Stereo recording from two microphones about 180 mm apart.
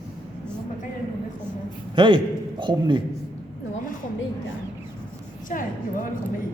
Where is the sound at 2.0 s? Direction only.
25° right (ahead or behind).